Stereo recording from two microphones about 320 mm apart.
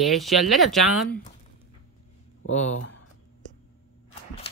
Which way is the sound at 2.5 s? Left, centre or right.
Left.